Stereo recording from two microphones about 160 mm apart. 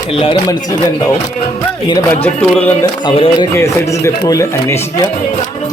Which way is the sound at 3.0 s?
30° left (ahead or behind).